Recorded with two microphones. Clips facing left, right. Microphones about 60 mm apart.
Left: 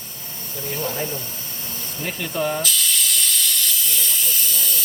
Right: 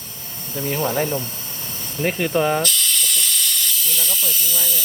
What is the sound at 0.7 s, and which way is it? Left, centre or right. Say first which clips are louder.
Speech: right 6 dB; right.